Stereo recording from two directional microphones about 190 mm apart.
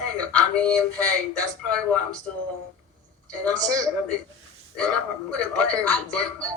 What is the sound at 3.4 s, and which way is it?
Speech, 5° left (ahead or behind).